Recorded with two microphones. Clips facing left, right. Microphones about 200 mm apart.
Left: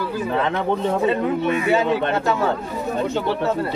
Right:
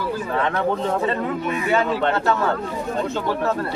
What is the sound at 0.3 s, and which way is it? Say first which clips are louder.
Speech: left 2 dB; 20° left (ahead or behind).